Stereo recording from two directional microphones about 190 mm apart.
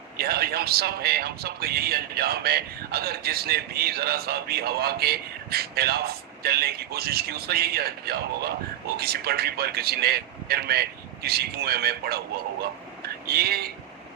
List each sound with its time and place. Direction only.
0.2 s a man's voice: 55° right (ahead or behind)
13.2 s a man's voice: 55° right (ahead or behind)